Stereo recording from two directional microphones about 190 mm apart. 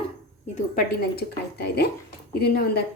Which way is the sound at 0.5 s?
50° left (ahead or behind).